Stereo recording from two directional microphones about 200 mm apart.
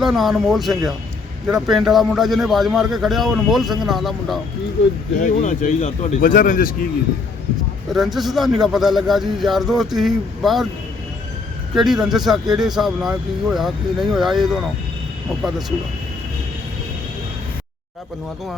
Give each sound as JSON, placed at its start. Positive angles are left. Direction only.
{"t": 0.0, "sound": "a man's voice", "side_deg": 0}
{"t": 5.2, "sound": "speech", "side_deg": 40}
{"t": 7.9, "sound": "a man's voice", "side_deg": 0}
{"t": 11.7, "sound": "a man's voice", "side_deg": 0}